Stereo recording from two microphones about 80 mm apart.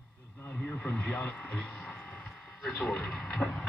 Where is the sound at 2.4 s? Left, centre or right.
Centre.